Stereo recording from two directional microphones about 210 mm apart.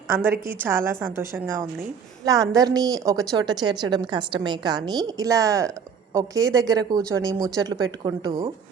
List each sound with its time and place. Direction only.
0.1 s a woman's voice: 10° right (ahead or behind); by 8.5 s 25° right (ahead or behind)